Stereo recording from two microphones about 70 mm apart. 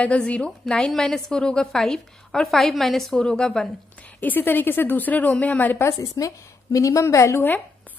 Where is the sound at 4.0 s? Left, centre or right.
Left.